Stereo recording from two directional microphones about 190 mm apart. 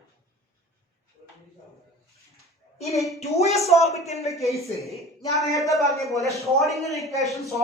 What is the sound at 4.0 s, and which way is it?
Speech, 35° left (ahead or behind).